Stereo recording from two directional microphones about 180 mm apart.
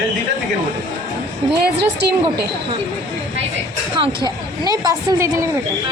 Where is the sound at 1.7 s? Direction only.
65° right (ahead or behind).